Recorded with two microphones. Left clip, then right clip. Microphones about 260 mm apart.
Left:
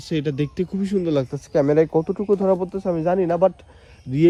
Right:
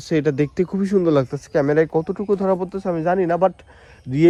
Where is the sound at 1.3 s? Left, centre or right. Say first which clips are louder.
Even; right.